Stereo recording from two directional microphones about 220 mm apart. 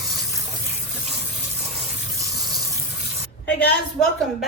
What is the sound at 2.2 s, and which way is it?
Water, 15° right (ahead or behind).